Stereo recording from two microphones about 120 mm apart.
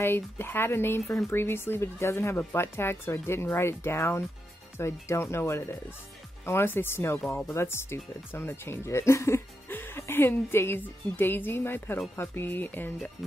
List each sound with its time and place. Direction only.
0.0 s speech: 20° left (ahead or behind)